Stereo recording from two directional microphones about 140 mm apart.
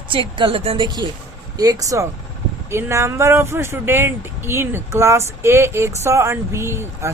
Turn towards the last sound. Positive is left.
turn(degrees=-20)  # may be behind; listen again after turning